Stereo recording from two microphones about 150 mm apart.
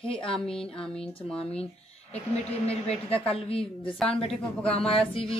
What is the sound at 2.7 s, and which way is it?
Speech, 40° left (ahead or behind).